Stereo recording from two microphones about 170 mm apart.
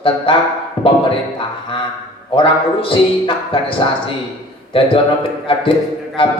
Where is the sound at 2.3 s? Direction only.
30° left (ahead or behind).